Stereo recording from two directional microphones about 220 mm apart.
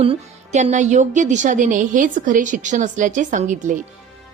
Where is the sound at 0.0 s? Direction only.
30° right (ahead or behind).